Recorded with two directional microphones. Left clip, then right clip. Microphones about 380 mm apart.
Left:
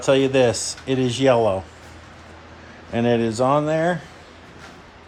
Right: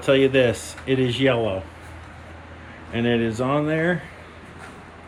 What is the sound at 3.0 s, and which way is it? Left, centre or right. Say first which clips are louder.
Speech: left 4 dB; centre.